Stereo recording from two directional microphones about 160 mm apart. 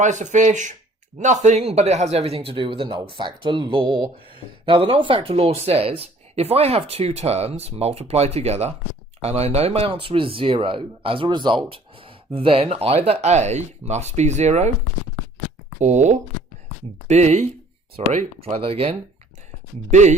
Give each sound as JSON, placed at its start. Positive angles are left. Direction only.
{"t": 0.0, "sound": "speech", "side_deg": -50}
{"t": 15.8, "sound": "speech", "side_deg": -45}
{"t": 19.9, "sound": "speech", "side_deg": -45}